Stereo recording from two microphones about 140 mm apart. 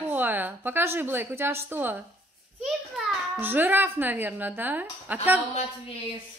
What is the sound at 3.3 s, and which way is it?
A woman's voice, 15° right (ahead or behind).